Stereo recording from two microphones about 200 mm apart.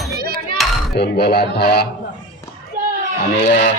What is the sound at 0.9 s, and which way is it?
Speech, 55° left (ahead or behind).